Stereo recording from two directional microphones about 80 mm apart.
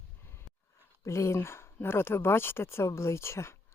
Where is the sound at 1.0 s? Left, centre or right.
Left.